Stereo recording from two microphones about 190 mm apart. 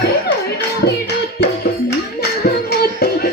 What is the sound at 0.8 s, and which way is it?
Music, 60° left (ahead or behind).